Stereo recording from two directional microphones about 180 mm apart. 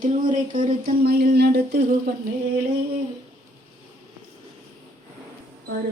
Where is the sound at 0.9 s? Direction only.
60° right (ahead or behind).